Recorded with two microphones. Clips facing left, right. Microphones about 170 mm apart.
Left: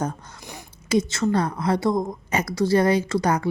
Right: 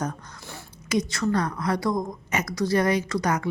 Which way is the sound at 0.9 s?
25° left (ahead or behind).